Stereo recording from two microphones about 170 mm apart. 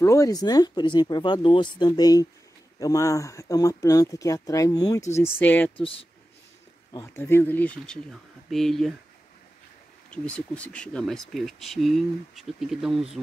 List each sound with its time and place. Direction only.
0.0 s speech: 20° left (ahead or behind)
5.8 s speech: 35° left (ahead or behind)
6.9 s speech: 15° left (ahead or behind); by 8.9 s centre (ahead or behind)
10.1 s speech: 5° left (ahead or behind)